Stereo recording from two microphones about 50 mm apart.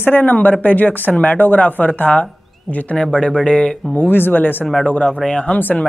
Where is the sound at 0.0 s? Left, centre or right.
Left; by 3.8 s centre.